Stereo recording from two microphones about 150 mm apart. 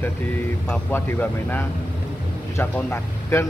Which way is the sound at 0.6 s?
10° left (ahead or behind).